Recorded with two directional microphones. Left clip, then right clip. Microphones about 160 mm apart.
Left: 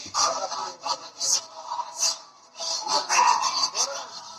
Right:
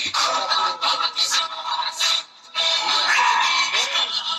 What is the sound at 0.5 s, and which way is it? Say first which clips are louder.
Music: right 10 dB; 50° right (ahead or behind).